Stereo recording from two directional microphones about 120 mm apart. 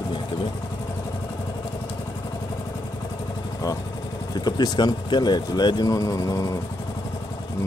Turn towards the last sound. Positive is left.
turn(degrees=30)  # may be behind; listen again after turning